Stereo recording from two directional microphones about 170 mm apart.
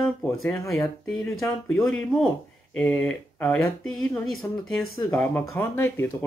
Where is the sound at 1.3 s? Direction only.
Centre (ahead or behind).